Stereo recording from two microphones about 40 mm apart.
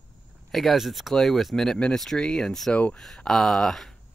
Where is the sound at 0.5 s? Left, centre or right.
Centre.